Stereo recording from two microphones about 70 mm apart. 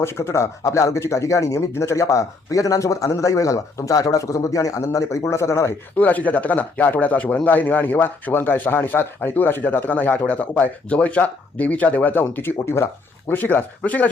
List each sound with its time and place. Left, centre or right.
0.0 s speech: left
6.0 s speech: left
12.6 s speech: left
13.2 s speech: left